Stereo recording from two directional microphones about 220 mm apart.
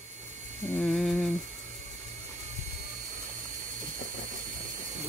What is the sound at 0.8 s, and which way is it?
Speech, centre (ahead or behind).